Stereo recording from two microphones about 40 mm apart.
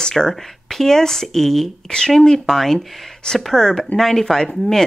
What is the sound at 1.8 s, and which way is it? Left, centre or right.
Speech, centre.